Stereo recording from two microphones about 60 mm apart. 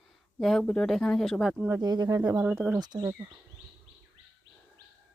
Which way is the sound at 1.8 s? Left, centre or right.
Right.